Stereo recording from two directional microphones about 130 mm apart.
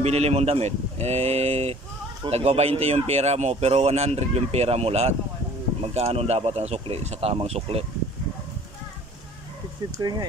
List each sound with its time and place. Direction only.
0.0 s speech: 55° right (ahead or behind)
9.9 s speech: 30° right (ahead or behind)